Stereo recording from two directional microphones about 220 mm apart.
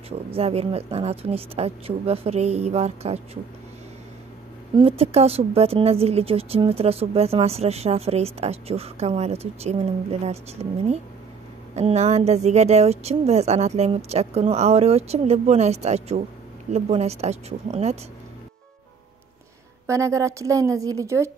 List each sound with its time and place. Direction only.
0.3 s speech: 25° right (ahead or behind)
4.7 s speech: 25° right (ahead or behind)
19.9 s a woman's voice: 15° right (ahead or behind)